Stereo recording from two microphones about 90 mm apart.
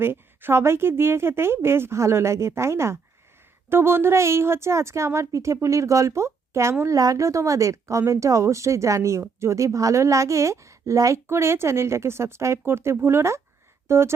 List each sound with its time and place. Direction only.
0.0 s a woman's voice: 25° right (ahead or behind)